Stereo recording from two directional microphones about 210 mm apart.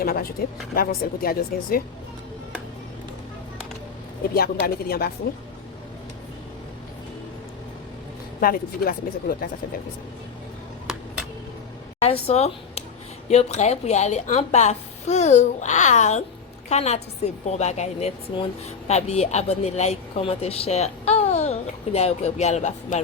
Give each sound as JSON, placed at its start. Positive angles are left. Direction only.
{"t": 0.0, "sound": "speech", "side_deg": 45}
{"t": 4.4, "sound": "speech", "side_deg": 45}
{"t": 8.4, "sound": "speech", "side_deg": 45}
{"t": 10.9, "sound": "a sound", "side_deg": -5}
{"t": 12.0, "sound": "a woman's voice", "side_deg": 25}